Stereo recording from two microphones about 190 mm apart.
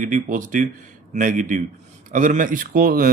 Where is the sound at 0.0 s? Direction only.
45° right (ahead or behind).